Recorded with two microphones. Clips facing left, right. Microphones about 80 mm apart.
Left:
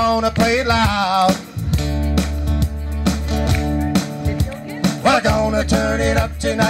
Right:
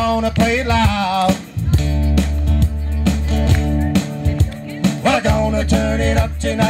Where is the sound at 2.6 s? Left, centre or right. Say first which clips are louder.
Right 2 dB; left.